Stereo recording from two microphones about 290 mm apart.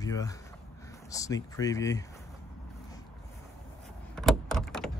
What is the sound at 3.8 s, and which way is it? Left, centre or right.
Power windows, centre.